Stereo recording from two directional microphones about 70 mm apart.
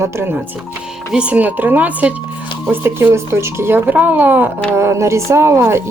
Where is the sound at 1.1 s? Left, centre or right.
Centre.